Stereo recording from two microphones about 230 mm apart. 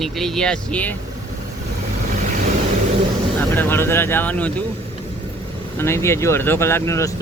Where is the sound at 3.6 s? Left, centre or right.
Centre.